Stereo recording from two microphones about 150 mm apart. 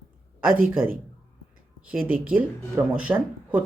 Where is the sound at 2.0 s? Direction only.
70° right (ahead or behind).